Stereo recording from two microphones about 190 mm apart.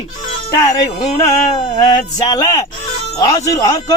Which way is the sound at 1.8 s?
20° left (ahead or behind).